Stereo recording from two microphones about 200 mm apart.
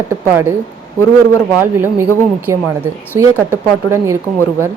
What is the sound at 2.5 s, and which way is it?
Speech, 15° right (ahead or behind).